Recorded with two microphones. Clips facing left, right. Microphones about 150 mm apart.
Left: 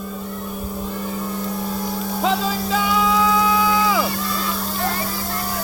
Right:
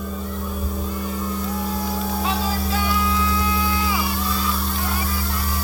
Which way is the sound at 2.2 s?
90° left.